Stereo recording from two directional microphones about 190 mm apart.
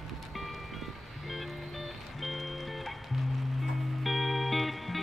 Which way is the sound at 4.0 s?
Centre (ahead or behind).